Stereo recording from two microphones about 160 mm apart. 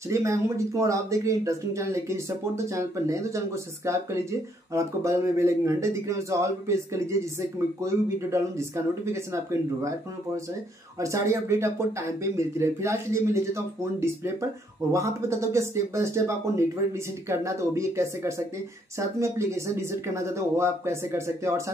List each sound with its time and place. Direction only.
0.1 s speech: 20° right (ahead or behind)